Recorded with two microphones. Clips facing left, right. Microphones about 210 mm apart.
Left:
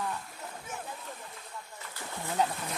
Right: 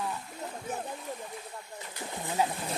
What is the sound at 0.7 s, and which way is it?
Speech, 35° right (ahead or behind).